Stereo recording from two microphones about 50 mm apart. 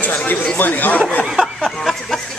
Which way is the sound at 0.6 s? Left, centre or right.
Left.